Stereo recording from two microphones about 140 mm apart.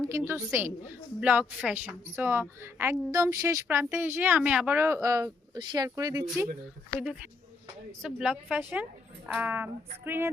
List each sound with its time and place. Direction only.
0.3 s a woman's voice: 15° right (ahead or behind)
7.0 s a woman's voice: 5° right (ahead or behind)